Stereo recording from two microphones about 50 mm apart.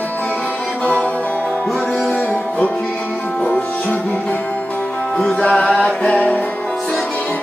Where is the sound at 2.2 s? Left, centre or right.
Left.